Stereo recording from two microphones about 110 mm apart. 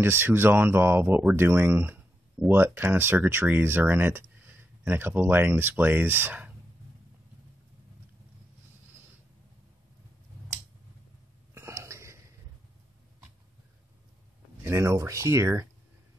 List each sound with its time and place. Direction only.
0.0 s speech: 20° right (ahead or behind)
11.5 s a sound: 25° right (ahead or behind)
14.6 s speech: 25° right (ahead or behind)